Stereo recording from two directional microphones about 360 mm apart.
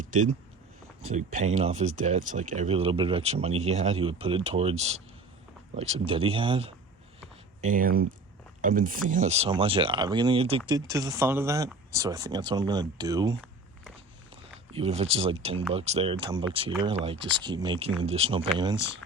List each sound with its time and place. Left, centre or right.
0.1 s speech: right